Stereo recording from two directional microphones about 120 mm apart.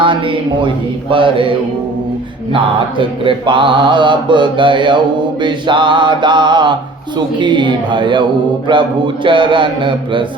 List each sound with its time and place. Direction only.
0.0 s mantra: 45° right (ahead or behind)
3.0 s mantra: 45° right (ahead or behind)